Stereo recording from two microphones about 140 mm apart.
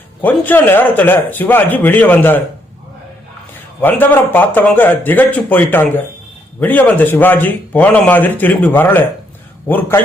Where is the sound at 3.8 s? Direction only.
15° left (ahead or behind).